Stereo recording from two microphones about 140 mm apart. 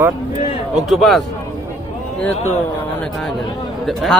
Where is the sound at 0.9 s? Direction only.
Centre (ahead or behind).